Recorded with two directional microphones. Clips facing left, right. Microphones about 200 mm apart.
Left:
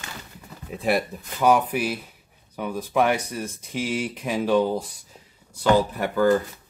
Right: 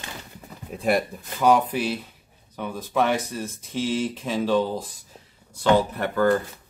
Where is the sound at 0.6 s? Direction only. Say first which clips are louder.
Right 1 dB; centre (ahead or behind).